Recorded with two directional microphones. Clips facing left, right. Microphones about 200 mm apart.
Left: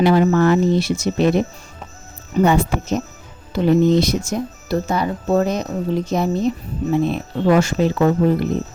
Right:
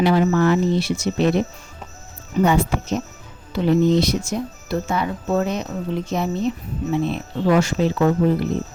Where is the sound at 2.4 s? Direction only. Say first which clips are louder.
Left 2 dB; 50° left (ahead or behind).